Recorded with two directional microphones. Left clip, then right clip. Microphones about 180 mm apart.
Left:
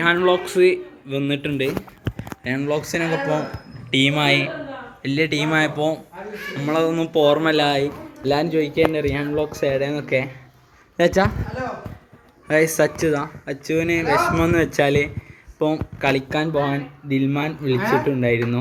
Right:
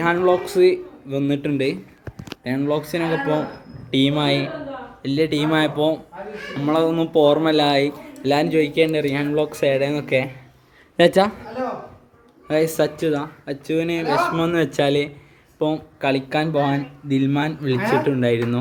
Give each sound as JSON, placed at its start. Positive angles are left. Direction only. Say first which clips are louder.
{"t": 0.0, "sound": "a man's voice", "louder": "even", "side_deg": -5}
{"t": 8.8, "sound": "speech", "louder": "left 3 dB", "side_deg": -85}
{"t": 9.2, "sound": "speech", "louder": "right 2 dB", "side_deg": -25}
{"t": 9.5, "sound": "speech", "louder": "right 2 dB", "side_deg": -5}
{"t": 12.5, "sound": "a man's voice", "louder": "left 2 dB", "side_deg": 0}
{"t": 17.7, "sound": "speech", "louder": "even", "side_deg": -65}
{"t": 18.0, "sound": "a man's voice", "louder": "even", "side_deg": -5}